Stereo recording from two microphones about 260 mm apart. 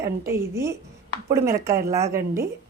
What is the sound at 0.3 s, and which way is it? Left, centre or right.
A woman's voice, centre.